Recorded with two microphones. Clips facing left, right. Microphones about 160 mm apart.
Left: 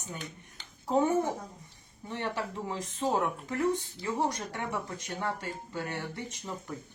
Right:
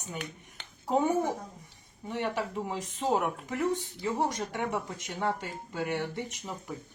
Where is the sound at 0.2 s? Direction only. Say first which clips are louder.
Right 3 dB; 65° right (ahead or behind).